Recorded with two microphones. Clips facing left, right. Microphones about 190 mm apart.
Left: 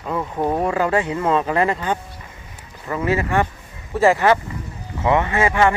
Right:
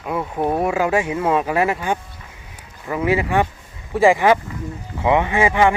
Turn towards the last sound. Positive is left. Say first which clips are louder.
# right 1 dB
turn(degrees=-15)  # may be behind; listen again after turning